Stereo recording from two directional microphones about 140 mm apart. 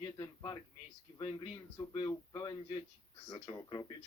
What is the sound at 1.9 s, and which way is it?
A man's voice, 30° left (ahead or behind).